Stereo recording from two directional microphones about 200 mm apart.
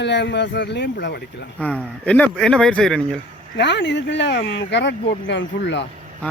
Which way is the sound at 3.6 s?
60° left (ahead or behind).